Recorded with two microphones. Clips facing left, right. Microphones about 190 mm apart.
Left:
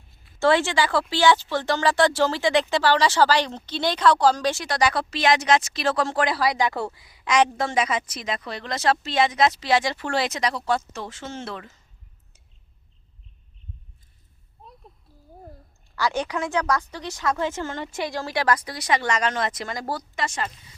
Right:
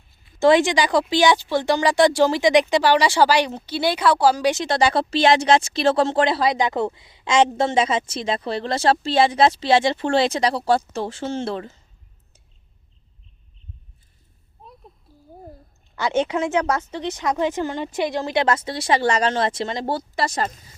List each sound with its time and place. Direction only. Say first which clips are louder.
0.3 s speech: right 4 dB; 15° right (ahead or behind)
4.5 s speech: right 4 dB; 25° right (ahead or behind)
16.0 s speech: right 4 dB; 20° right (ahead or behind); by 20.7 s 40° right (ahead or behind)